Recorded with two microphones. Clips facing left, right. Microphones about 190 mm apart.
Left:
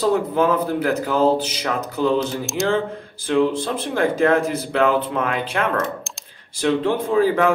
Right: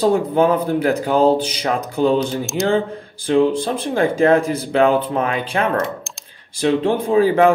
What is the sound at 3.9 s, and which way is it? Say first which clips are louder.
Speech: right 3 dB; 20° right (ahead or behind).